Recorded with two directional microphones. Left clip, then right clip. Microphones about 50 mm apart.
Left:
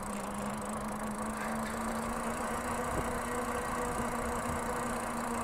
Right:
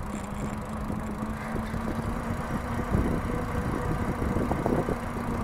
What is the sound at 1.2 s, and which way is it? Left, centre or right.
Vehicle, left.